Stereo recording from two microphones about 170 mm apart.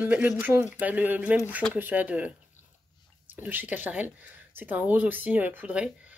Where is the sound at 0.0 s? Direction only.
10° right (ahead or behind).